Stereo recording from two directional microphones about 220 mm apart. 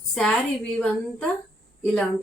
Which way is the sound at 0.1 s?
Centre (ahead or behind).